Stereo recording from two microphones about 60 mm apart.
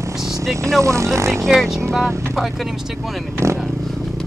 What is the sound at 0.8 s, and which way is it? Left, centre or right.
Speech, right.